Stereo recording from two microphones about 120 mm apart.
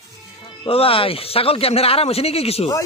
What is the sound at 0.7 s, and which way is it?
Speech, 50° left (ahead or behind).